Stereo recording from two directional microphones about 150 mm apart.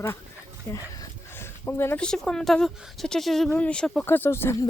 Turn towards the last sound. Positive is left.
turn(degrees=15)  # may be behind; listen again after turning